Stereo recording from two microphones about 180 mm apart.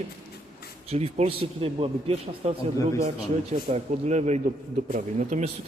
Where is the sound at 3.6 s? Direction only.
40° right (ahead or behind).